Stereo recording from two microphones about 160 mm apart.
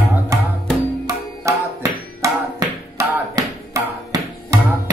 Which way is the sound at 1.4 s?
20° right (ahead or behind).